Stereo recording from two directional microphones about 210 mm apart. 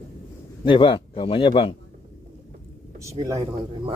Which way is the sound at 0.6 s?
25° left (ahead or behind).